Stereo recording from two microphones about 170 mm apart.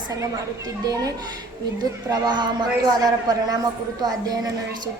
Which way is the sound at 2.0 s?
25° right (ahead or behind).